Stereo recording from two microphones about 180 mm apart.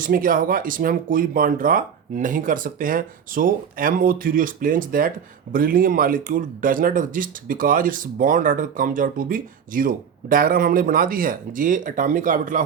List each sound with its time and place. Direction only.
0.0 s speech: 50° right (ahead or behind)